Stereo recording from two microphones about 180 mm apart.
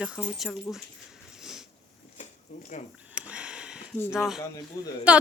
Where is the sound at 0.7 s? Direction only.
15° left (ahead or behind).